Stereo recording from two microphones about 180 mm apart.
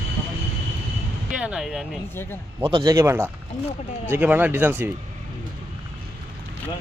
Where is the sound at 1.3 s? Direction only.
5° right (ahead or behind).